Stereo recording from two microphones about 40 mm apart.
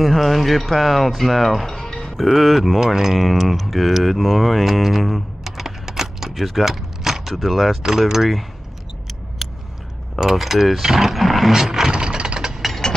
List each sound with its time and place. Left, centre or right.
0.0 s speech: centre
1.8 s music: centre
2.2 s speech: centre
2.8 s speech: centre
4.8 s typing: centre
6.4 s power windows: centre
7.3 s speech: centre
10.3 s speech: centre
11.5 s mechanisms: centre
11.9 s a sound: right